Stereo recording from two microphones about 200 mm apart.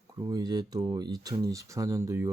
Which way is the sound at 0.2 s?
20° right (ahead or behind).